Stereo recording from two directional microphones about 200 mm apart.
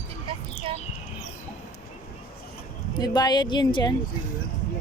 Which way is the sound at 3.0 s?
20° left (ahead or behind).